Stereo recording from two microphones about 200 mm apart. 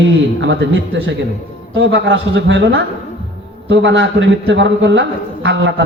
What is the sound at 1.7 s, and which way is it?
A man's voice, 65° right (ahead or behind).